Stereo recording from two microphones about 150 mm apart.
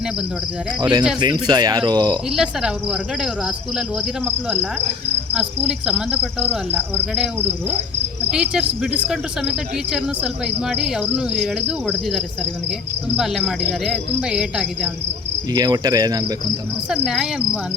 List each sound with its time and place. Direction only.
0.8 s cricket: 30° right (ahead or behind)
1.2 s speech: 30° right (ahead or behind)
2.3 s speech: 5° right (ahead or behind)
5.6 s cricket: 5° right (ahead or behind)
8.3 s speech: 5° right (ahead or behind)
15.5 s speech: 25° right (ahead or behind)
16.9 s speech: 5° right (ahead or behind)